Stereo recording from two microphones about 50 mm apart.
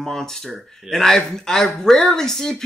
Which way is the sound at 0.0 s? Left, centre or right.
Centre.